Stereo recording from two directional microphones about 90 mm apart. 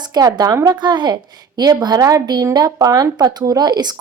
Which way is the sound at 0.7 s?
55° right (ahead or behind).